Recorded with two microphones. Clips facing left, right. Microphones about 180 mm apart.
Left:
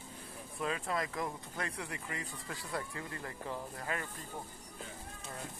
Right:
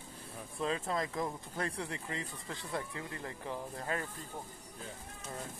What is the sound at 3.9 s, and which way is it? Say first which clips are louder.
Speech: right 2 dB; 35° right (ahead or behind).